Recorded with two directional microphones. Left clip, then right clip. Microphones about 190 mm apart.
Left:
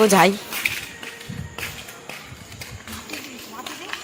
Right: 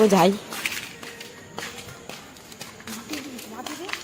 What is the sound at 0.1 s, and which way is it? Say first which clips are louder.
Speech: left 3 dB; 5° right (ahead or behind).